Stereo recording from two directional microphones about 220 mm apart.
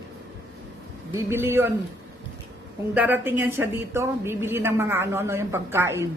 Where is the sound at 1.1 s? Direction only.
10° right (ahead or behind).